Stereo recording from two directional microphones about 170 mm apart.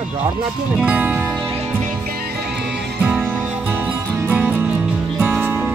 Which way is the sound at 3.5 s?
10° right (ahead or behind).